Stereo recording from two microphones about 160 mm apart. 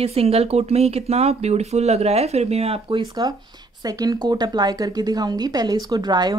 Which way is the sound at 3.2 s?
25° right (ahead or behind).